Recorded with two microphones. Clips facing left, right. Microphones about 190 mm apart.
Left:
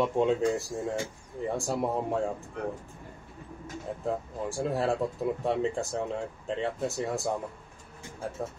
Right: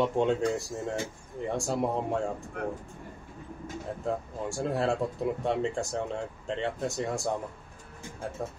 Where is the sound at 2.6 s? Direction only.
55° right (ahead or behind).